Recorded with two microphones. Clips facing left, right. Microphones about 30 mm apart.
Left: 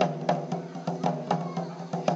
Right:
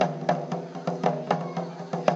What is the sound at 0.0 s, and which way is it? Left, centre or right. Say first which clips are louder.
Music: right 1 dB; centre.